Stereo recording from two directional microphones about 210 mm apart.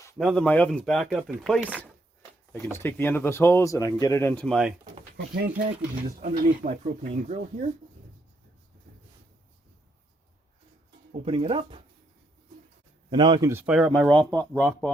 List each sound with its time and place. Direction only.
0.2 s speech: centre (ahead or behind)
2.7 s speech: 10° left (ahead or behind)
5.1 s speech: 50° right (ahead or behind)
6.1 s speech: 40° right (ahead or behind)
11.3 s speech: 25° right (ahead or behind)
13.1 s speech: 20° right (ahead or behind); by 14.8 s 10° left (ahead or behind)